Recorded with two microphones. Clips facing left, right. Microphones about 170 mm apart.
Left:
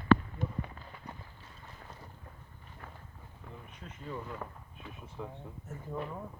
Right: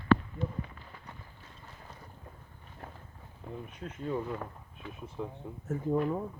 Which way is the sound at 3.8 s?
45° right (ahead or behind).